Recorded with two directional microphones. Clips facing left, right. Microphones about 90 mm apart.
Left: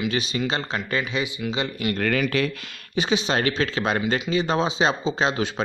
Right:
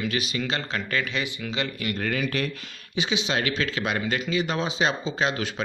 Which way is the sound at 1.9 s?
70° left (ahead or behind).